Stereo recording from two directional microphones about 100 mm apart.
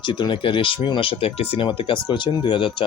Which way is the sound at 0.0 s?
50° left (ahead or behind).